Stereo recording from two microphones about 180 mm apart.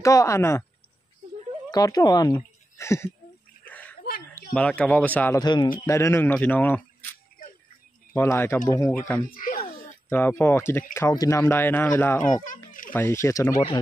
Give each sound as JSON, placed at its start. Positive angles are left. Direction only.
{"t": 0.0, "sound": "speech", "side_deg": 15}
{"t": 1.7, "sound": "a woman's voice", "side_deg": 20}
{"t": 3.6, "sound": "a sound", "side_deg": 10}
{"t": 4.4, "sound": "speech", "side_deg": 5}
{"t": 5.4, "sound": "a man's voice", "side_deg": 25}
{"t": 8.1, "sound": "speech", "side_deg": 10}
{"t": 9.3, "sound": "a sound", "side_deg": 50}
{"t": 10.0, "sound": "speech", "side_deg": 10}